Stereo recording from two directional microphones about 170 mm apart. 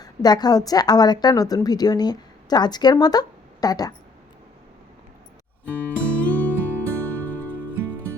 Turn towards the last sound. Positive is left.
turn(degrees=10)  # may be behind; listen again after turning